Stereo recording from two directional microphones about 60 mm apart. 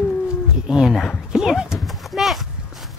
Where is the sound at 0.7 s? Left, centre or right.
Centre.